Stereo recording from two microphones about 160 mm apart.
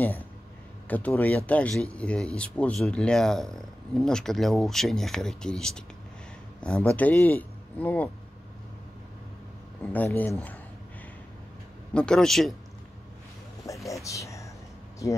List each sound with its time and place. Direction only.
0.8 s speech: 10° left (ahead or behind)
9.9 s speech: 10° left (ahead or behind)
11.9 s speech: 5° left (ahead or behind)
13.8 s speech: 20° left (ahead or behind)